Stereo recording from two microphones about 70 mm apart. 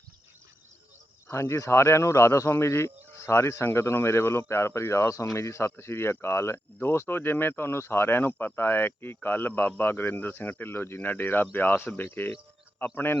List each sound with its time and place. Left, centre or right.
1.3 s speech: left